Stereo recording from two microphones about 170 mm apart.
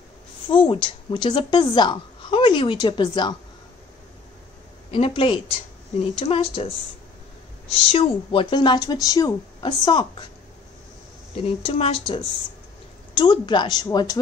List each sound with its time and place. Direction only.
0.5 s a woman's voice: 30° left (ahead or behind)
4.9 s speech: 30° left (ahead or behind)
7.9 s a woman's voice: 30° left (ahead or behind)
11.4 s a woman's voice: 35° left (ahead or behind)